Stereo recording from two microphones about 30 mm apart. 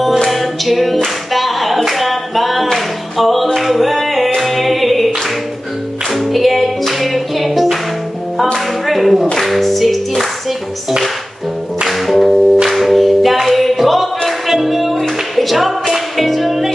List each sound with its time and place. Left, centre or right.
0.3 s music: centre
4.4 s singing: centre
6.3 s music: centre
11.9 s music: centre